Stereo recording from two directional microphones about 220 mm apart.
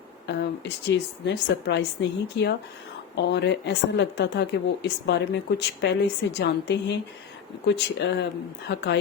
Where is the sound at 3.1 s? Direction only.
50° left (ahead or behind).